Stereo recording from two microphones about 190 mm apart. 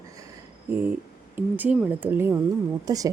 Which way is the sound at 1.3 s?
10° right (ahead or behind).